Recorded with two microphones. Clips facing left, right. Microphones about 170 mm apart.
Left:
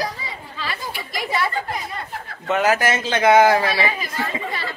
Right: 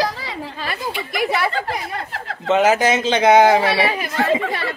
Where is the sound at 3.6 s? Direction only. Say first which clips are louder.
Right 4 dB; 75° right (ahead or behind).